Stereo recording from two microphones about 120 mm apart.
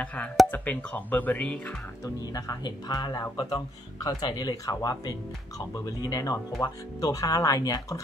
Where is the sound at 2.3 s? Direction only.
30° left (ahead or behind).